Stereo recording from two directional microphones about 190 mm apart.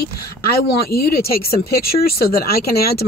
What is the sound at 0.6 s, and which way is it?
Speech, 55° left (ahead or behind).